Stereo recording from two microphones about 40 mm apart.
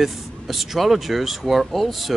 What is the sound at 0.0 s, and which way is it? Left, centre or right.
Speech, centre.